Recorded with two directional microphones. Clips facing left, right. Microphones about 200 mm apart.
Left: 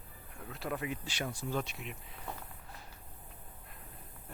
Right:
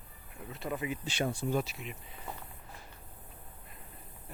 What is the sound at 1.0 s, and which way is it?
Speech, 25° right (ahead or behind).